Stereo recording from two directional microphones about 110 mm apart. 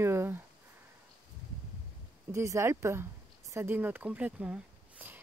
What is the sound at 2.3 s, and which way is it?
Speech, 25° right (ahead or behind).